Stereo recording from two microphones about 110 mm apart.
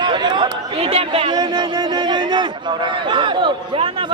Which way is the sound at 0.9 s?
60° right (ahead or behind).